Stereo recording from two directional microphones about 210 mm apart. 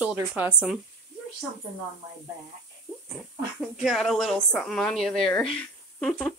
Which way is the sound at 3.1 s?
Centre (ahead or behind).